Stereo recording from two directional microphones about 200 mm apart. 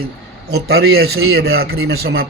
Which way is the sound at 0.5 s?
55° right (ahead or behind).